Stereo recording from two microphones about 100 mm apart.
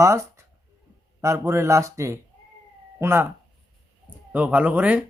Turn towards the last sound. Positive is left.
turn(degrees=-15)  # may be behind; listen again after turning